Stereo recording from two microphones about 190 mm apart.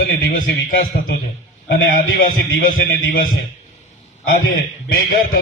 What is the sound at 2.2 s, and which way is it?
A man's voice, 50° left (ahead or behind).